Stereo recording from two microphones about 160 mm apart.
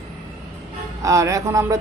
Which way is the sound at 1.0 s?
20° right (ahead or behind).